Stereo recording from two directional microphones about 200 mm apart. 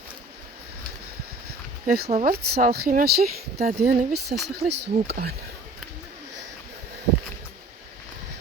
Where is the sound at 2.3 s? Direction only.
50° right (ahead or behind).